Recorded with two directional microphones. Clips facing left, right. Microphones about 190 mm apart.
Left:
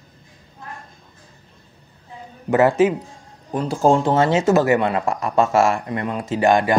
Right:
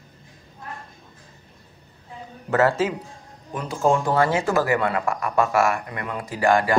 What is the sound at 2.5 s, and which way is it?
Speech, 15° left (ahead or behind).